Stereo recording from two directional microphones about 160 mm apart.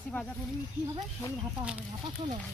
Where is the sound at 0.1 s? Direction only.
10° left (ahead or behind).